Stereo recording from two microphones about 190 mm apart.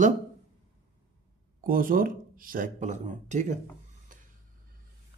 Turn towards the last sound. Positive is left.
turn(degrees=-40)  # may be behind; listen again after turning